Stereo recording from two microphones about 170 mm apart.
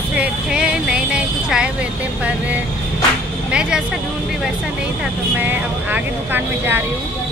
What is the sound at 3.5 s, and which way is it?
Speech, 5° right (ahead or behind).